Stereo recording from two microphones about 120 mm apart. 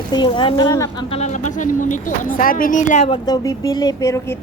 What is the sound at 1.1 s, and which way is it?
Speech, 80° left.